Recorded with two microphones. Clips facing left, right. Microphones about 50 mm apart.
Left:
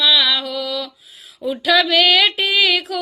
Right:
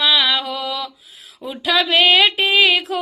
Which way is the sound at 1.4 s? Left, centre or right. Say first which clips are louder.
Left 3 dB; right.